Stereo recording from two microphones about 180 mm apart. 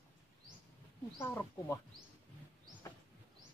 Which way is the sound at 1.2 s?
15° left (ahead or behind).